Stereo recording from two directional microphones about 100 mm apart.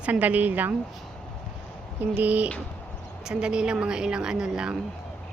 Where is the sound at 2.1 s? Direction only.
15° right (ahead or behind).